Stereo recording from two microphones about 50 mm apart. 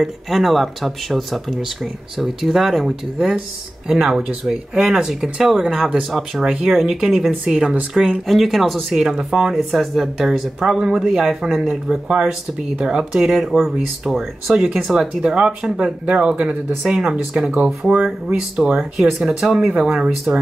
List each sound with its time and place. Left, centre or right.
0.0 s speech: centre
6.0 s speech: centre
6.4 s speech: centre
6.7 s speech: centre
8.3 s speech: centre
8.9 s speech: centre
9.6 s speech: centre
18.6 s speech: centre